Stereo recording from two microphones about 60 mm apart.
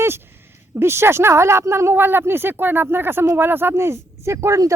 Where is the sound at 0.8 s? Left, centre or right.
Right.